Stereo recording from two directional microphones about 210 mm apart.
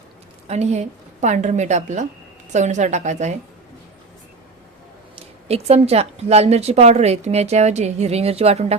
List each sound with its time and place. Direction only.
0.4 s speech: 30° right (ahead or behind)
5.1 s speech: 30° right (ahead or behind)